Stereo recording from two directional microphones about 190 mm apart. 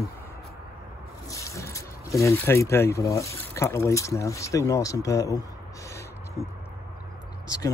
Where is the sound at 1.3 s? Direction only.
15° left (ahead or behind).